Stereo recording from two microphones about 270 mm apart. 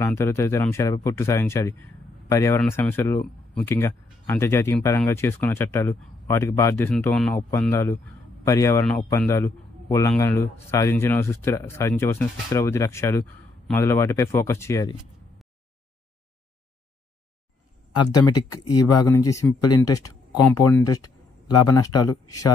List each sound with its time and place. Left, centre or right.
0.0 s a man's voice: centre
17.9 s a man's voice: centre